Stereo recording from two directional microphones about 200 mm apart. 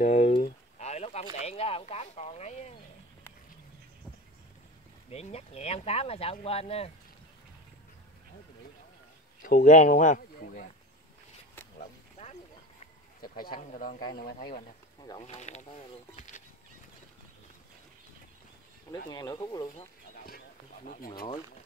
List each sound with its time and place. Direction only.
0.0 s a sound: 35° left (ahead or behind)
5.1 s speech: 30° left (ahead or behind)
9.4 s speech: 45° left (ahead or behind)
11.8 s whip: 30° left (ahead or behind)
13.2 s speech: 45° left (ahead or behind)
15.0 s speech: 25° left (ahead or behind)
19.0 s speech: 20° left (ahead or behind)
20.2 s a sound: 45° left (ahead or behind)